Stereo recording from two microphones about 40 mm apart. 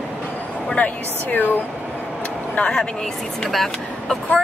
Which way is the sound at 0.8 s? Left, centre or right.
Left.